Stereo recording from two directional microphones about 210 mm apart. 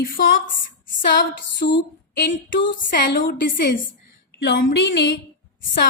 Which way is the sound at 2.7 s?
45° left (ahead or behind).